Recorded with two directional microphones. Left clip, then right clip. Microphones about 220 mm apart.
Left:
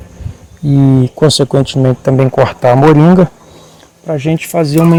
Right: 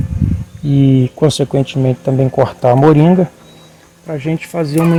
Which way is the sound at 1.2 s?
25° left (ahead or behind).